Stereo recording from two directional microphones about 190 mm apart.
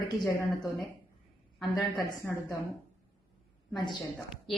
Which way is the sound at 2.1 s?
15° left (ahead or behind).